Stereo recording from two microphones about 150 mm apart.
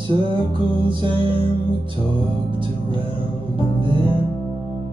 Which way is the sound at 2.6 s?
35° right (ahead or behind).